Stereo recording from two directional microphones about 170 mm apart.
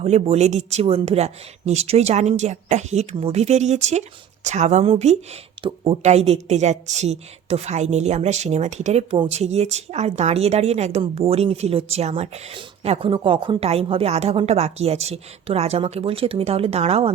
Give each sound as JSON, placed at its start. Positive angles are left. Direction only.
{"t": 0.0, "sound": "speech", "side_deg": -40}